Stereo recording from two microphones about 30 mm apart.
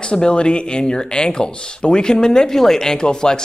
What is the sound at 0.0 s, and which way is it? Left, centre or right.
Speech, left.